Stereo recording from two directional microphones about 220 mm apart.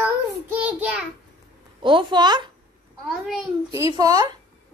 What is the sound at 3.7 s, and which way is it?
Speech, 15° right (ahead or behind).